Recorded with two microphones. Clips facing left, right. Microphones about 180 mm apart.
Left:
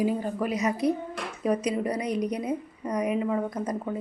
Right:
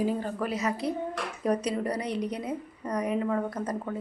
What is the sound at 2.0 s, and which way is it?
Speech, 30° right (ahead or behind).